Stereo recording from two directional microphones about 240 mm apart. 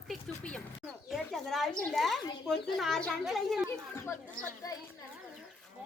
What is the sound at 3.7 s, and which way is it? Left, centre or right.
A child's voice, centre.